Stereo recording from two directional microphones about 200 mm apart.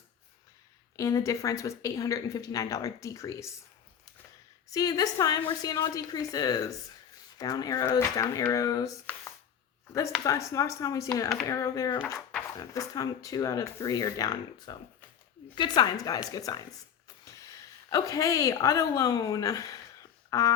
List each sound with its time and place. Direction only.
0.9 s speech: 15° left (ahead or behind)
4.7 s speech: 20° left (ahead or behind)
10.2 s speech: 15° left (ahead or behind)
17.9 s speech: 15° left (ahead or behind)